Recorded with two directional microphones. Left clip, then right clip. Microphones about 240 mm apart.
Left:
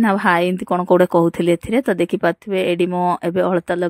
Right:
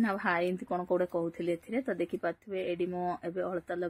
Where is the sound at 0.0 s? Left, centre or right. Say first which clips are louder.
Left 14 dB; left.